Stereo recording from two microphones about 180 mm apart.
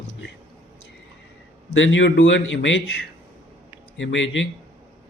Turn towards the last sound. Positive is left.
turn(degrees=90)